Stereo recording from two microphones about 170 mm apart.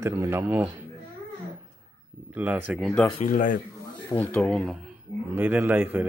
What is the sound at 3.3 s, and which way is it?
Speech, 50° left (ahead or behind).